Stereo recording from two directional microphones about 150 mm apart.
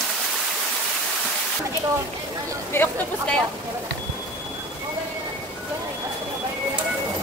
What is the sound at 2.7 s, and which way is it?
Speech, 10° left (ahead or behind).